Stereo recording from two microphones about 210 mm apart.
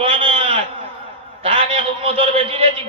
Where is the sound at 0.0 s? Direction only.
25° right (ahead or behind).